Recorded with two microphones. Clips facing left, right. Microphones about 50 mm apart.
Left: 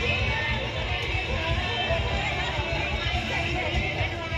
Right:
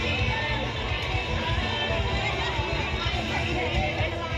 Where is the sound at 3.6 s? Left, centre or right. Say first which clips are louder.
Right 1 dB; centre.